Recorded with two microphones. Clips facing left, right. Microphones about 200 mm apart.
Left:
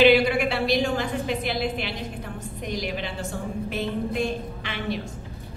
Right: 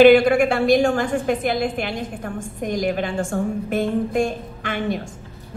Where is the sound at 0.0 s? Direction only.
50° right (ahead or behind).